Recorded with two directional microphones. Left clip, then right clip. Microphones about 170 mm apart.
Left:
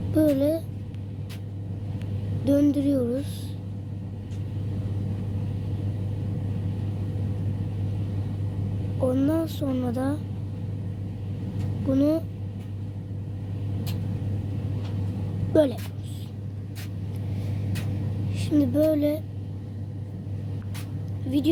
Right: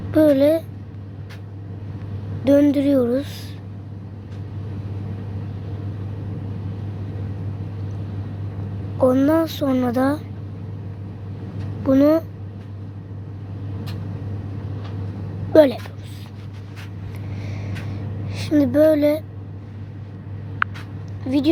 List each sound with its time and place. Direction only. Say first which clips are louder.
0.1 s speech: right 8 dB; 25° right (ahead or behind)
2.4 s speech: right 7 dB; 25° right (ahead or behind)
9.0 s speech: right 8 dB; 30° right (ahead or behind)
11.9 s speech: right 8 dB; 25° right (ahead or behind)
15.5 s speech: right 8 dB; 30° right (ahead or behind)
18.3 s speech: right 5 dB; 20° right (ahead or behind)
21.2 s a woman's voice: right 5 dB; 15° right (ahead or behind)